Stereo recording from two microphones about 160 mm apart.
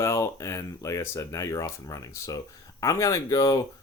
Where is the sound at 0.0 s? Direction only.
20° left (ahead or behind).